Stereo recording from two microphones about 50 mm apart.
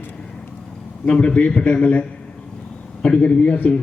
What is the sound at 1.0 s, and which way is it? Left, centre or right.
A man's voice, left.